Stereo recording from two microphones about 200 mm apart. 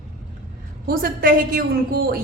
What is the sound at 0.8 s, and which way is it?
Speech, 45° right (ahead or behind).